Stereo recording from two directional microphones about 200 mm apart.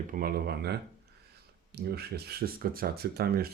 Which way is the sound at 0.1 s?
45° right (ahead or behind).